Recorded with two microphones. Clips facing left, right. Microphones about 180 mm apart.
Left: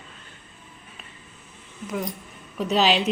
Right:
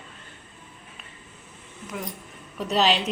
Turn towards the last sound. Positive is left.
turn(degrees=0)  # may be behind; listen again after turning